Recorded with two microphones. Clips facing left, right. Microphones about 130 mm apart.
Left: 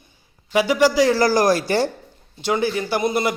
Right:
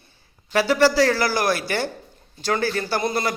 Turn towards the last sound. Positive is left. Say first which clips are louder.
# left 3 dB
turn(degrees=20)  # may be behind; listen again after turning